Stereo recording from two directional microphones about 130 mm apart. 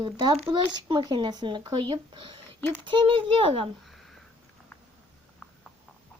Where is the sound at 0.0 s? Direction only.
35° right (ahead or behind).